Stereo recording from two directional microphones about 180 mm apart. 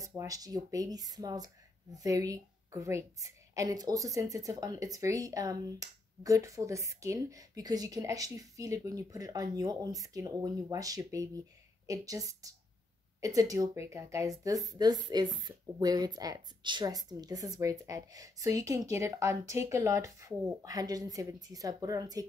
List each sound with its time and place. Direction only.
0.0 s a woman's voice: 20° right (ahead or behind)